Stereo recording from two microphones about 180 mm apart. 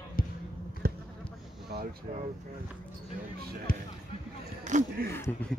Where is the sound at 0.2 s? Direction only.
55° left (ahead or behind).